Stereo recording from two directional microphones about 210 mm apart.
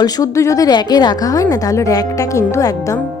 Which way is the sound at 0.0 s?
15° left (ahead or behind).